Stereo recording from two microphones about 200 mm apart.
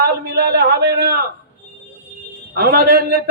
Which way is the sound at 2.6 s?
50° right (ahead or behind).